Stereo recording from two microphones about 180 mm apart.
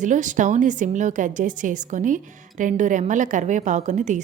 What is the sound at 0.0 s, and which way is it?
A woman's voice, 45° right (ahead or behind).